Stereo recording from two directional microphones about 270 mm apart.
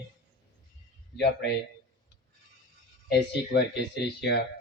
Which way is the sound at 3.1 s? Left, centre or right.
Left.